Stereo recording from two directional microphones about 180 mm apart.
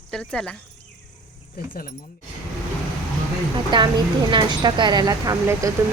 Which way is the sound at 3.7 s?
25° right (ahead or behind).